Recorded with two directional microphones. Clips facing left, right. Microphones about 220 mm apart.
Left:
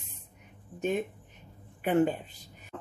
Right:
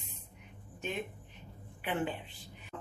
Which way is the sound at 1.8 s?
45° left (ahead or behind).